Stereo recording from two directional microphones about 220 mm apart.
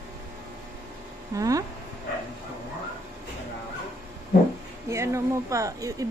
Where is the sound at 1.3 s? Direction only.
15° right (ahead or behind).